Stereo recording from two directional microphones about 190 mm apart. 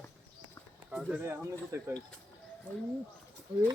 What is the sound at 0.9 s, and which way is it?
Speech, 5° right (ahead or behind).